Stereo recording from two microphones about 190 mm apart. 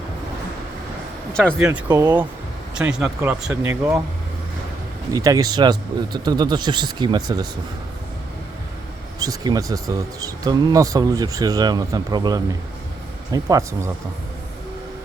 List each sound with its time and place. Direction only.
1.3 s speech: 5° left (ahead or behind)
1.5 s speech: 10° right (ahead or behind)
5.1 s speech: 20° right (ahead or behind)
9.1 s speech: 20° right (ahead or behind)